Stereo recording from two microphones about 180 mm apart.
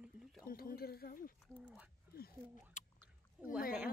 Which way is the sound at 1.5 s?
5° right (ahead or behind).